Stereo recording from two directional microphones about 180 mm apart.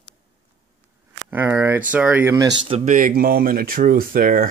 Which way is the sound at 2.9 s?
50° right (ahead or behind).